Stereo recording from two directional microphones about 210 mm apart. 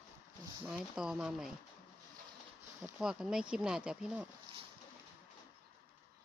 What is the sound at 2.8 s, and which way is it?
Speech, 5° right (ahead or behind).